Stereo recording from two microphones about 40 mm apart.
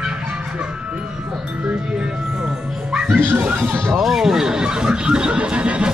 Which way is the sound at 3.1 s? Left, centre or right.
Right.